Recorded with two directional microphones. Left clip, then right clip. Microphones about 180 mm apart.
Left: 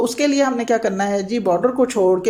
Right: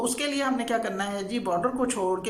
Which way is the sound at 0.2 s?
30° left (ahead or behind).